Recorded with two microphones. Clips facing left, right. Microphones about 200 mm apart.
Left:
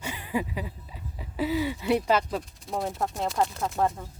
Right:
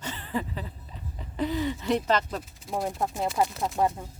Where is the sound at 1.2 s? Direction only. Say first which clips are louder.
Left 1 dB; 5° left (ahead or behind).